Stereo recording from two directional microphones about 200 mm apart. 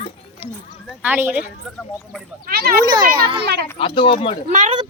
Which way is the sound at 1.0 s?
10° right (ahead or behind).